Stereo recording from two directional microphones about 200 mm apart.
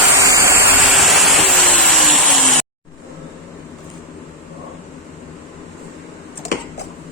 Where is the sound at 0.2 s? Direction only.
15° right (ahead or behind).